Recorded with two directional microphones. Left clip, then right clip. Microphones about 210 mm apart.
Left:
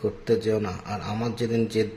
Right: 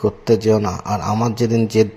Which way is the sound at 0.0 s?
30° right (ahead or behind).